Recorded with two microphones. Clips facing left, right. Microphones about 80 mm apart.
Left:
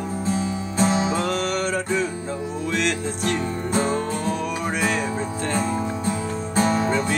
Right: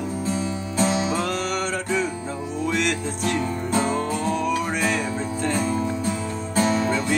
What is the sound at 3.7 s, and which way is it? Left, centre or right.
Music, left.